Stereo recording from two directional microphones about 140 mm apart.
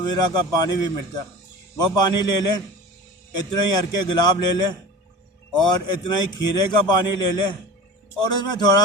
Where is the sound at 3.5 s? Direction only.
30° left (ahead or behind).